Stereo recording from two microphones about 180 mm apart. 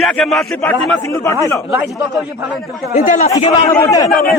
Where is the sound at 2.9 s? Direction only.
45° left (ahead or behind).